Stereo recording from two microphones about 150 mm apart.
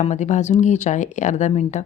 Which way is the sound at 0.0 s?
50° left (ahead or behind).